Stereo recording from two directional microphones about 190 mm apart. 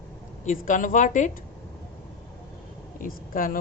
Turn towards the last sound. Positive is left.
turn(degrees=45)  # may be behind; listen again after turning